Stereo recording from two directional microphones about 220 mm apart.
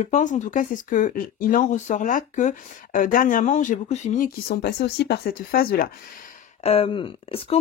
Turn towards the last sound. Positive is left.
turn(degrees=25)  # may be behind; listen again after turning